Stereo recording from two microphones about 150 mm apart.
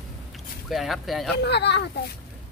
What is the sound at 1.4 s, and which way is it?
Speech, 90° left.